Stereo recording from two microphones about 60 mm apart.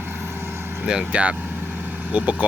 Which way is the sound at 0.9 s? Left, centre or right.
Centre.